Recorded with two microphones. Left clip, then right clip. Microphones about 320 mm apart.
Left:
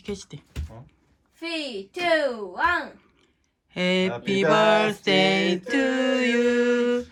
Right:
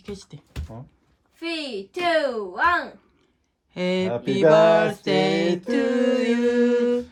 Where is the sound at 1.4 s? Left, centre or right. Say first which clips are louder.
Right 1 dB; centre.